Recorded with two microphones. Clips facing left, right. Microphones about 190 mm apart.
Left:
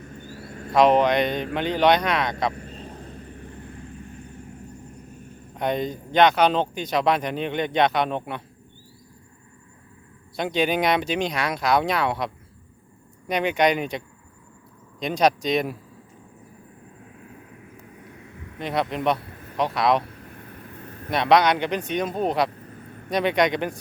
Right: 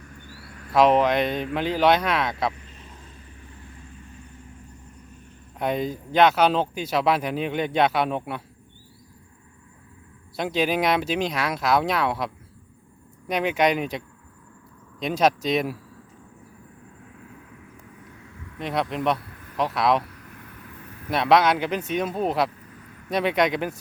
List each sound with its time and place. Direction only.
0.0 s a sound: 25° left (ahead or behind)
0.7 s speech: centre (ahead or behind)
2.7 s vehicle: 60° left (ahead or behind)
5.5 s speech: 5° right (ahead or behind)
10.3 s speech: centre (ahead or behind)
18.6 s speech: centre (ahead or behind)
19.2 s a sound: 30° left (ahead or behind)
19.5 s speech: centre (ahead or behind)
20.0 s vehicle: 30° left (ahead or behind)
21.1 s speech: centre (ahead or behind)